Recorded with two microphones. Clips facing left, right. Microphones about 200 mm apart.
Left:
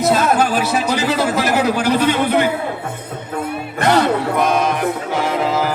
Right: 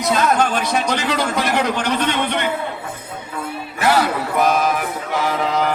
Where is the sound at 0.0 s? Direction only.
5° left (ahead or behind).